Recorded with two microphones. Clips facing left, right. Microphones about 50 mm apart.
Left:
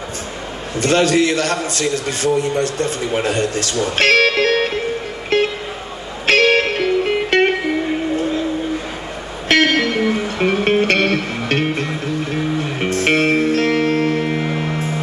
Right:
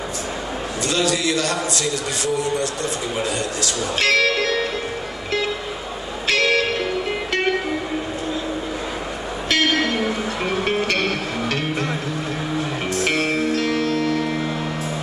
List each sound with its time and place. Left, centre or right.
0.7 s a man's voice: left
5.3 s music: left
9.5 s music: left